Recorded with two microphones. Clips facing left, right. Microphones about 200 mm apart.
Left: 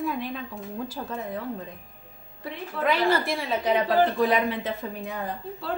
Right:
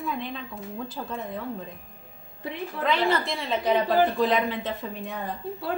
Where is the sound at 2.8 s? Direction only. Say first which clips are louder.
Left 1 dB; 5° left (ahead or behind).